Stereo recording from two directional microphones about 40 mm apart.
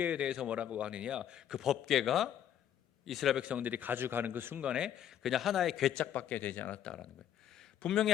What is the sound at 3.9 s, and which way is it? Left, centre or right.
Speech, right.